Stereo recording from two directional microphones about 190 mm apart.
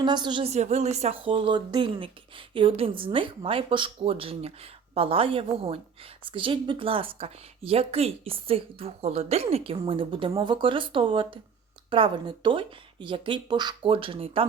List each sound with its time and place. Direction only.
0.0 s a woman's voice: 25° right (ahead or behind)